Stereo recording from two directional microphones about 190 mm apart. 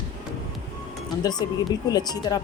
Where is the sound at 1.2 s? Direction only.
20° left (ahead or behind).